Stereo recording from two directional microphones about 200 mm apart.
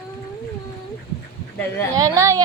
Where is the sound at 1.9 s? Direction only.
15° right (ahead or behind).